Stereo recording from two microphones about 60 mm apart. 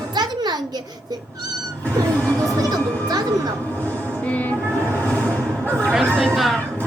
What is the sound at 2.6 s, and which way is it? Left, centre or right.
Speech, right.